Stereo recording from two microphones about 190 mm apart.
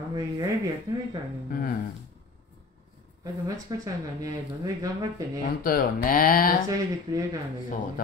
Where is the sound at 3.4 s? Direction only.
20° right (ahead or behind).